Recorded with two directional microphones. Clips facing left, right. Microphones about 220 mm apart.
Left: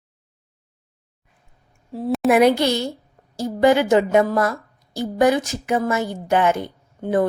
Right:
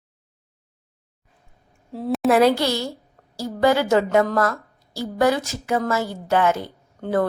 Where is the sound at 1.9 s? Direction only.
Centre (ahead or behind).